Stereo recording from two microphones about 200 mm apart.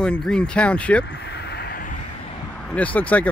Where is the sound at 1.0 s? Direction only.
60° left (ahead or behind).